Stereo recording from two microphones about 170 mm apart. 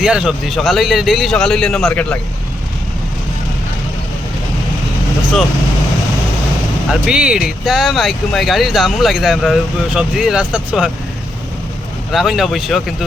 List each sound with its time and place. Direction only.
0.0 s speech: 5° right (ahead or behind)
6.9 s speech: 5° right (ahead or behind)
12.1 s speech: centre (ahead or behind)